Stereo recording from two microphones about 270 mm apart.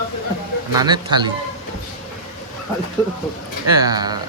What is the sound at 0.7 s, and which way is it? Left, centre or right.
Speech, centre.